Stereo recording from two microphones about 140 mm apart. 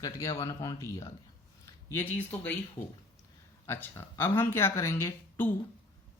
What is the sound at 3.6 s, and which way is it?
Speech, 15° left (ahead or behind).